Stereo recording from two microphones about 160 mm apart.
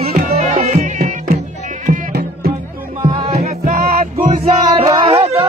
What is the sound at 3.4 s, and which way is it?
Music, 55° right (ahead or behind).